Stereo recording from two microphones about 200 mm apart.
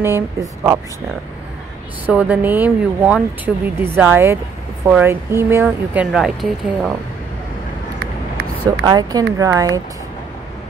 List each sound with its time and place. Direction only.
0.0 s speech: 10° right (ahead or behind)
2.0 s speech: 5° right (ahead or behind)
8.8 s speech: 20° right (ahead or behind)